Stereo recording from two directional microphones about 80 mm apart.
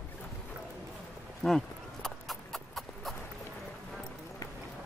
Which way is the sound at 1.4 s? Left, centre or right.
Centre.